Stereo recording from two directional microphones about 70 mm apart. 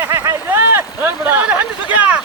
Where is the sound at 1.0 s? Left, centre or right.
Right.